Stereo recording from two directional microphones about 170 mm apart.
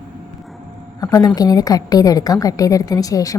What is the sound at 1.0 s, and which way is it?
A woman's voice, 20° left (ahead or behind).